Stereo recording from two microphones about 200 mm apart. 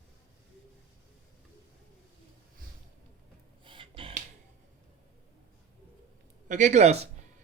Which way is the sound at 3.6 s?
25° right (ahead or behind).